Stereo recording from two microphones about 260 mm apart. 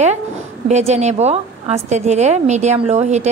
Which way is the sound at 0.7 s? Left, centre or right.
Right.